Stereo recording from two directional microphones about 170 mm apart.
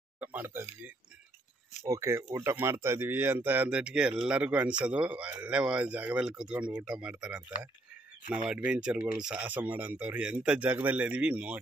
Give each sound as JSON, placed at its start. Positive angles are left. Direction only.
{"t": 0.2, "sound": "speech", "side_deg": -10}
{"t": 8.5, "sound": "speech", "side_deg": -5}